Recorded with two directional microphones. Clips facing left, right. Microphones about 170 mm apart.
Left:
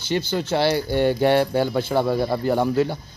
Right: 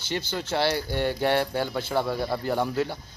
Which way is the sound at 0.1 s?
15° left (ahead or behind).